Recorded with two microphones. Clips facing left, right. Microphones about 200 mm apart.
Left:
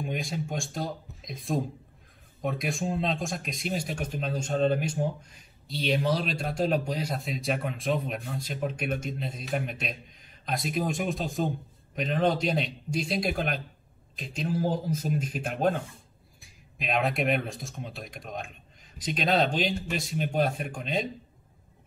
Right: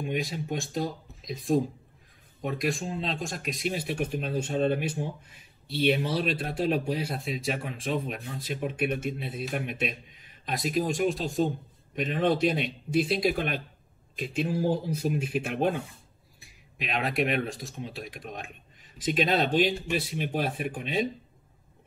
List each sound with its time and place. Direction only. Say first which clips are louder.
0.0 s speech: right 1 dB; centre (ahead or behind)
2.8 s speech: left 4 dB; 50° left (ahead or behind)
3.1 s speech: left 1 dB; centre (ahead or behind)